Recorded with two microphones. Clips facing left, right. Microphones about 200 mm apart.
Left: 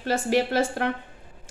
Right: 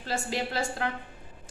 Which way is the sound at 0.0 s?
65° left (ahead or behind).